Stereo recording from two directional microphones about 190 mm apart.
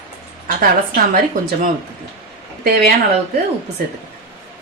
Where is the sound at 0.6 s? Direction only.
50° right (ahead or behind).